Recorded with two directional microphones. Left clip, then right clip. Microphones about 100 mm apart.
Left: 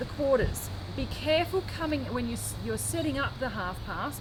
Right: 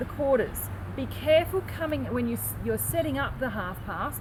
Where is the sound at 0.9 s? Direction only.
25° left (ahead or behind).